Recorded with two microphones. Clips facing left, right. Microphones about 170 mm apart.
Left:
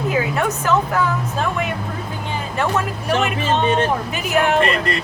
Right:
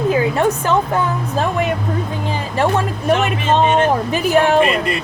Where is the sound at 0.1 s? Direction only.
30° right (ahead or behind).